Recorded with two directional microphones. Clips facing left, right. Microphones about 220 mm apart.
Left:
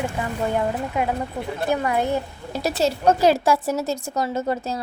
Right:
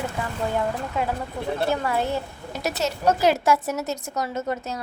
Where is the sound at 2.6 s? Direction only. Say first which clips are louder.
Left 3 dB; 30° left (ahead or behind).